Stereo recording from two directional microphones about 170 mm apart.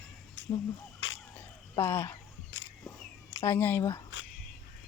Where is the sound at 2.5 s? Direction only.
90° left.